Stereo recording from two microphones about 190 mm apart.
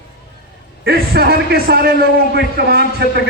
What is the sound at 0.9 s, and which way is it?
A man's voice, 55° right (ahead or behind).